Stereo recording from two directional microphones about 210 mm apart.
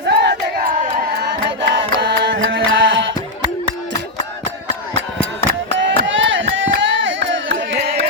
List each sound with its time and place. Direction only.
0.1 s battle cry: 50° right (ahead or behind)
1.2 s music: 55° right (ahead or behind)
5.4 s a sound: 60° right (ahead or behind)